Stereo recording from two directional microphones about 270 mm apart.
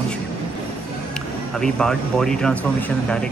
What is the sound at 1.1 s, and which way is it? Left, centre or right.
Speech, centre.